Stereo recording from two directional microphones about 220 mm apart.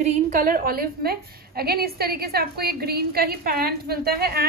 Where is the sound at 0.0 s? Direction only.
40° right (ahead or behind).